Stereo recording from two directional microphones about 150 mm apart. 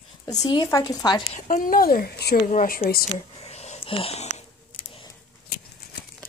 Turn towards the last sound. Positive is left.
turn(degrees=45)  # may be behind; listen again after turning